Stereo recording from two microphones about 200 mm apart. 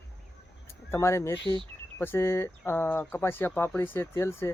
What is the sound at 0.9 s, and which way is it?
Speech, 15° left (ahead or behind).